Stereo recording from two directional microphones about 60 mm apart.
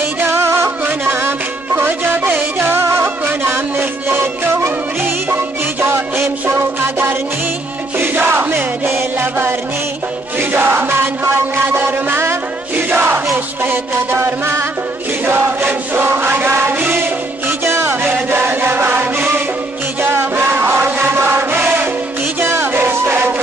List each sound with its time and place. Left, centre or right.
0.2 s music: right
8.0 s chant: right
11.6 s mantra: right
12.7 s battle cry: right
15.2 s chant: right
17.6 s music: right
20.0 s chant: right
22.4 s music: right